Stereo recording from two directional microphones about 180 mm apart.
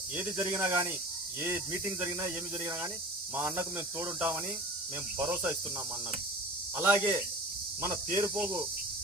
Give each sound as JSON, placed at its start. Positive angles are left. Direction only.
{"t": 0.2, "sound": "speech", "side_deg": -15}
{"t": 6.7, "sound": "speech", "side_deg": -15}